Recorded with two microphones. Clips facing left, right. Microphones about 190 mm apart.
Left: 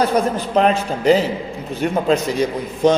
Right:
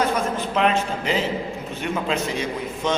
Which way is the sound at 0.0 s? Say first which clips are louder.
Left 5 dB; 35° left (ahead or behind).